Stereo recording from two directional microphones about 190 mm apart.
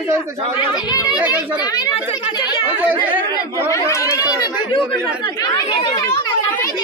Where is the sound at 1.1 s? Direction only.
10° right (ahead or behind).